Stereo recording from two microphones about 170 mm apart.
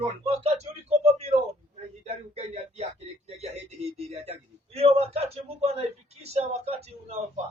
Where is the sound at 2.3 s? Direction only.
35° right (ahead or behind).